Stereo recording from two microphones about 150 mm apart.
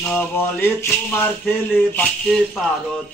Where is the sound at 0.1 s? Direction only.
15° left (ahead or behind).